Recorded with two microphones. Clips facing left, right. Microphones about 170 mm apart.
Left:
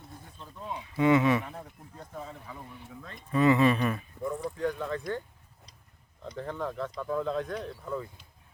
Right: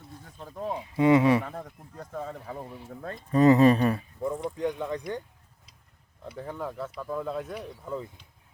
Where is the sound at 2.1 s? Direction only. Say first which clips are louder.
Right 6 dB; 50° right (ahead or behind).